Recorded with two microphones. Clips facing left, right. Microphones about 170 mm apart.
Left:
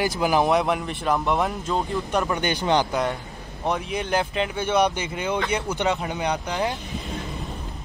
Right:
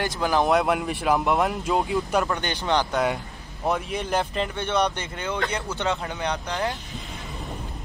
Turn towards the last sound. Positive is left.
turn(degrees=15)  # may be behind; listen again after turning